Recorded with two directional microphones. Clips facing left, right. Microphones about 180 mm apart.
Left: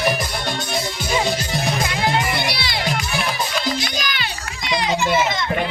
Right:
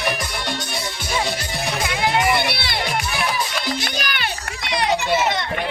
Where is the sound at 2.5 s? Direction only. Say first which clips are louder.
Even; 55° right (ahead or behind).